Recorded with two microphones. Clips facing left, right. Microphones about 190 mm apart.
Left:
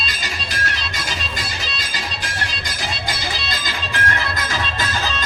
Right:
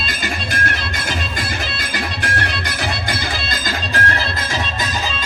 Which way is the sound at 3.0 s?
50° right (ahead or behind).